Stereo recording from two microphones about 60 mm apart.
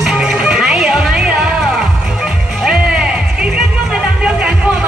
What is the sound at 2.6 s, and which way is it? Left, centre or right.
Music, centre.